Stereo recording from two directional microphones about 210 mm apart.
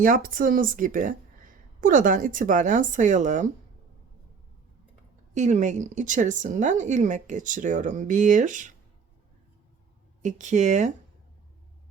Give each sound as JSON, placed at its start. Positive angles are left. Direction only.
{"t": 0.0, "sound": "a woman's voice", "side_deg": -40}
{"t": 5.3, "sound": "a woman's voice", "side_deg": -35}
{"t": 10.2, "sound": "a woman's voice", "side_deg": -35}